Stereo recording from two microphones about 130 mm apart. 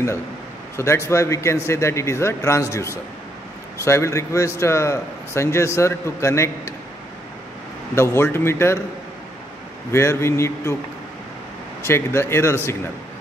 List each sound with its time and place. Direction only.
0.7 s a man's voice: 20° left (ahead or behind)
7.9 s a man's voice: 20° left (ahead or behind)
9.9 s a man's voice: 20° left (ahead or behind)
11.8 s a man's voice: 20° left (ahead or behind)